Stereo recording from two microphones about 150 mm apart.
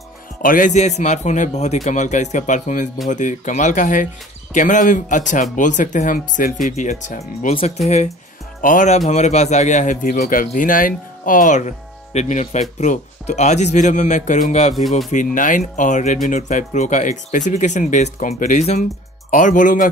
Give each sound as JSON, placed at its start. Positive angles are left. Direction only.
{"t": 0.4, "sound": "a man's voice", "side_deg": 65}
{"t": 14.8, "sound": "speech", "side_deg": 0}
{"t": 15.0, "sound": "speech", "side_deg": 60}